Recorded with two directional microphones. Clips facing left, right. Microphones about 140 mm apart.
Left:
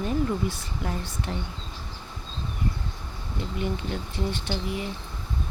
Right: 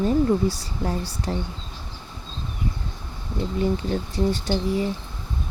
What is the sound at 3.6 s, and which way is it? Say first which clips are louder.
Speech: right 7 dB; 35° right (ahead or behind).